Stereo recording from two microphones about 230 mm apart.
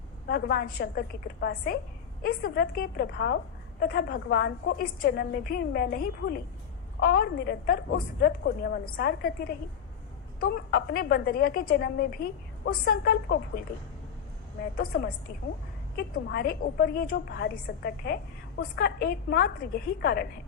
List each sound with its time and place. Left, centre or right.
0.3 s a woman's voice: left
10.4 s a woman's voice: left
14.8 s a woman's voice: left